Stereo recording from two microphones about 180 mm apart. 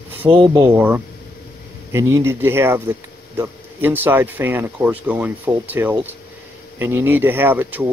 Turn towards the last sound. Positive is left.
turn(degrees=-10)  # may be behind; listen again after turning